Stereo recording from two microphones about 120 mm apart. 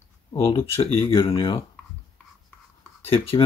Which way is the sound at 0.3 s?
45° left (ahead or behind).